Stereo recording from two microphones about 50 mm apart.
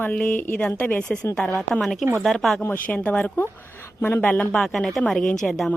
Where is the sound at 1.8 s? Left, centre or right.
Centre.